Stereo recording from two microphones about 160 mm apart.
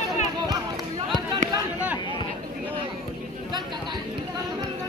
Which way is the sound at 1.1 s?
25° right (ahead or behind).